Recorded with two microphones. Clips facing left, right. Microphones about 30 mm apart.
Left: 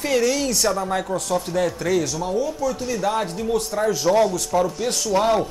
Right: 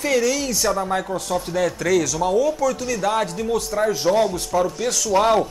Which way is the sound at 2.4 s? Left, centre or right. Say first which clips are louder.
Right 4 dB; right.